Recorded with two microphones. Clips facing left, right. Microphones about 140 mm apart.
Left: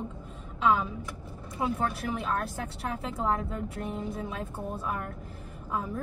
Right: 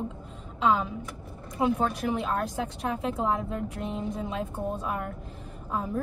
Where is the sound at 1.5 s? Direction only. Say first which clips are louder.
Right 4 dB; 20° right (ahead or behind).